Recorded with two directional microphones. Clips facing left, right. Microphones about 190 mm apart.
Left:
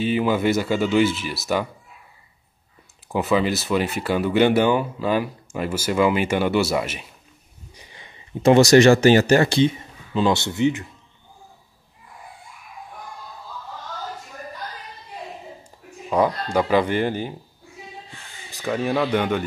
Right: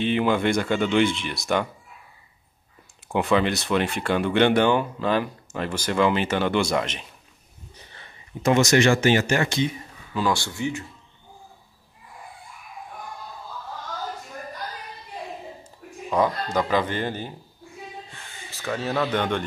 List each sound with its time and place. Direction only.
0.0 s speech: 5° left (ahead or behind)
3.1 s speech: 5° left (ahead or behind)
7.7 s a sound: 15° left (ahead or behind)
8.4 s speech: 30° left (ahead or behind)
16.1 s speech: 10° left (ahead or behind)
18.5 s speech: 15° left (ahead or behind)